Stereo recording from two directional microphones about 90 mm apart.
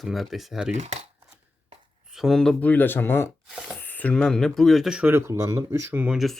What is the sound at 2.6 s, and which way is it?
Speech, 20° left (ahead or behind).